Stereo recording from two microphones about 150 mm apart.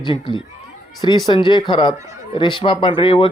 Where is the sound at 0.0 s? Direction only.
30° left (ahead or behind).